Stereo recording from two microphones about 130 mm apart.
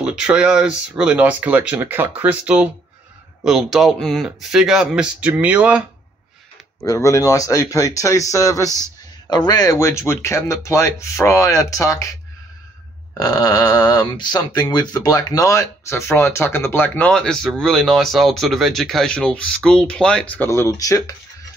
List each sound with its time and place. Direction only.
0.0 s speech: 5° right (ahead or behind)
6.8 s speech: 25° left (ahead or behind)
8.6 s speech: 25° right (ahead or behind)
9.3 s speech: 30° left (ahead or behind)
13.2 s speech: 30° left (ahead or behind)